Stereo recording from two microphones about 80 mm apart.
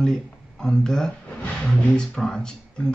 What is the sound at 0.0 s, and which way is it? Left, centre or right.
Speech, centre.